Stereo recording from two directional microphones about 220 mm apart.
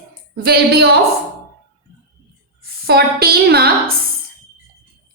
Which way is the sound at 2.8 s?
45° right (ahead or behind).